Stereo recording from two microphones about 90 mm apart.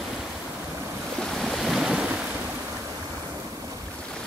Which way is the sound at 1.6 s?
5° right (ahead or behind).